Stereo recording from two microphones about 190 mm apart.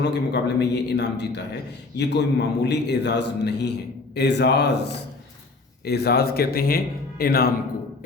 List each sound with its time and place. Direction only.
0.0 s a man's voice: 65° left (ahead or behind)